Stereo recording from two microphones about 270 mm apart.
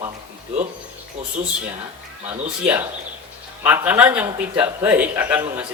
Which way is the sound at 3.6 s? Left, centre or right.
Centre.